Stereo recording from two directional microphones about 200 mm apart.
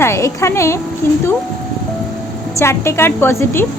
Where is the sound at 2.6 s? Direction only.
15° left (ahead or behind).